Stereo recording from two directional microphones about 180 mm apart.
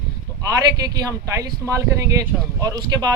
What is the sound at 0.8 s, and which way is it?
Speech, 20° right (ahead or behind).